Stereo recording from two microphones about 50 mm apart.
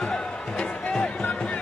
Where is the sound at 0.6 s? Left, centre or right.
Centre.